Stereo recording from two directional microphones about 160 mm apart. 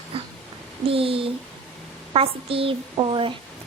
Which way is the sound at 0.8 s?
35° right (ahead or behind).